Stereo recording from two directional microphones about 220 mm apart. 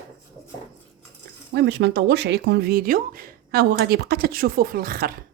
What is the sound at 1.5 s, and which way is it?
Speech, 50° right (ahead or behind).